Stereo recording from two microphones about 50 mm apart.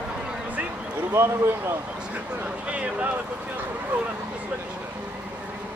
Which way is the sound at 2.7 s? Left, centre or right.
Right.